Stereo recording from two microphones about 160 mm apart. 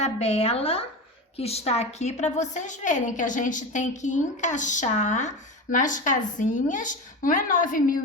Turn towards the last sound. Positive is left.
turn(degrees=60)  # may be behind; listen again after turning